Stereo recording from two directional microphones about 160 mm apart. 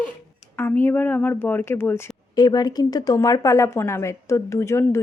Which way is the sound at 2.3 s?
25° left (ahead or behind).